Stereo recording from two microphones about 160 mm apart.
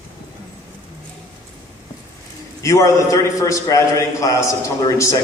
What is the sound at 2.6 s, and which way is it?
A man's voice, 20° left (ahead or behind).